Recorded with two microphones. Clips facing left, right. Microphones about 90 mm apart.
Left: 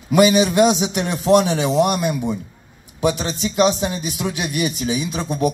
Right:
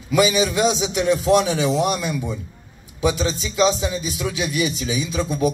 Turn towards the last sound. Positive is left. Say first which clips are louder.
# even
turn(degrees=50)  # may be behind; listen again after turning